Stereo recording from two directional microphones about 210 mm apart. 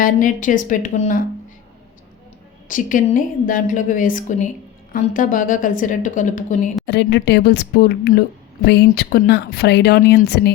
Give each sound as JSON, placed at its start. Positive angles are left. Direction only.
{"t": 0.0, "sound": "a woman's voice", "side_deg": 40}
{"t": 2.6, "sound": "a woman's voice", "side_deg": 40}
{"t": 6.8, "sound": "speech", "side_deg": 55}